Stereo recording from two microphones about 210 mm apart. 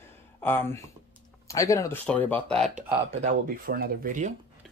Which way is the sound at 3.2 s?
45° right (ahead or behind).